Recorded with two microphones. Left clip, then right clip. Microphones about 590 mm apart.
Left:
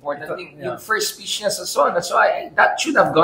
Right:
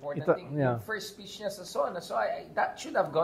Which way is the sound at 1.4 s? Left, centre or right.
Right.